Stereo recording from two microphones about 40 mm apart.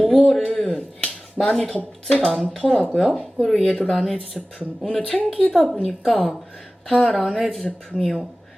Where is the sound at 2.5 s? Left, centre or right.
Left.